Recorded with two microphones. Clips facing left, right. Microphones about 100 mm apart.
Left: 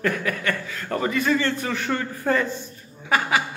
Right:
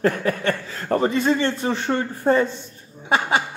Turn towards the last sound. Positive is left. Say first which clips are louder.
# right 2 dB
turn(degrees=-25)  # may be behind; listen again after turning